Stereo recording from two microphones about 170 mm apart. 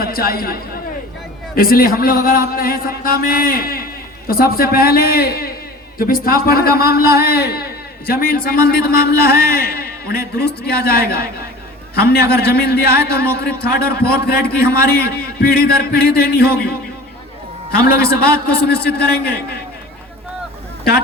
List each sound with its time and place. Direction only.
0.0 s a man's voice: 60° left (ahead or behind)
18.2 s a man's voice: 65° left (ahead or behind)